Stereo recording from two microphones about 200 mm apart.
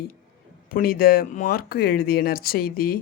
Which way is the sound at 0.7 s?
45° left (ahead or behind).